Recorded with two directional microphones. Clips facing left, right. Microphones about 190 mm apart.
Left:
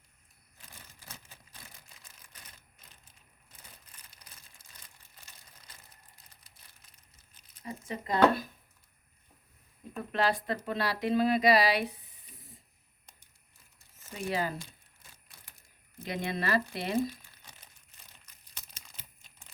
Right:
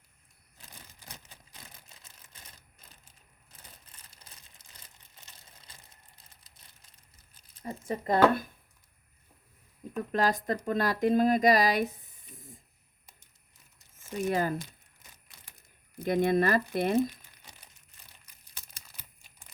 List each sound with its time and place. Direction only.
2.0 s typewriter: 25° right (ahead or behind)
4.1 s crumpling: 30° right (ahead or behind)
5.7 s a sound: 25° right (ahead or behind)
7.6 s speech: 50° right (ahead or behind)
10.1 s speech: 40° right (ahead or behind)
14.3 s speech: 50° right (ahead or behind)
16.0 s speech: 50° right (ahead or behind)
17.0 s crumpling: 15° right (ahead or behind)